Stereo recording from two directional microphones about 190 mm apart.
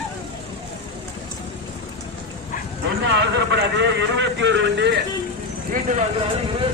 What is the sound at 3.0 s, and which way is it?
A man's voice, 65° right (ahead or behind).